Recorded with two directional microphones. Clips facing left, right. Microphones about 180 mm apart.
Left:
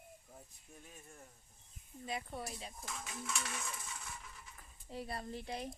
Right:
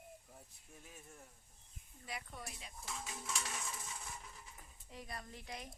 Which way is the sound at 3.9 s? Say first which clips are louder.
Even; 25° right (ahead or behind).